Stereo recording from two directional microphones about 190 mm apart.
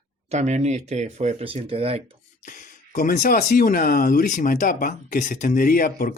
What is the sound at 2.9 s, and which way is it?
Speech, 50° left (ahead or behind).